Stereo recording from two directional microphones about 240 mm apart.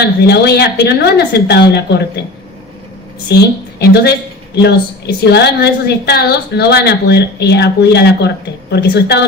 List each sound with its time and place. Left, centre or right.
0.0 s a woman's voice: left
3.2 s a woman's voice: left